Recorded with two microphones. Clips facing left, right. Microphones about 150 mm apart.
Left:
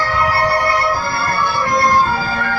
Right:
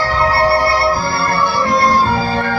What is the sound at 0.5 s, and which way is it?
Music, 20° left (ahead or behind).